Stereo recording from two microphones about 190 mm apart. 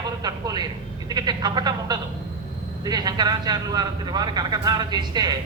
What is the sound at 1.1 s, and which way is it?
A man's voice, 20° right (ahead or behind).